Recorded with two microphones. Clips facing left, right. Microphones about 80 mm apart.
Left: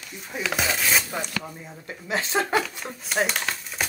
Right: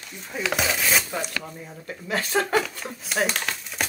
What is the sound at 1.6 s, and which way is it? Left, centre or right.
Speech, centre.